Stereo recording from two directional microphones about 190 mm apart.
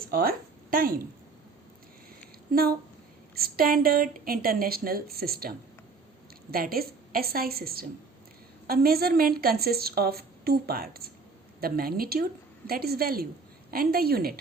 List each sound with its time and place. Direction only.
0.1 s a woman's voice: 50° right (ahead or behind)
2.5 s a woman's voice: 50° right (ahead or behind)